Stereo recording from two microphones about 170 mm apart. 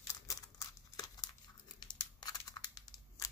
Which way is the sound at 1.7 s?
25° left (ahead or behind).